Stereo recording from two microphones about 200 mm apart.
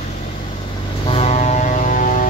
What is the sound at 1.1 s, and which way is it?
Vehicle, 30° left (ahead or behind).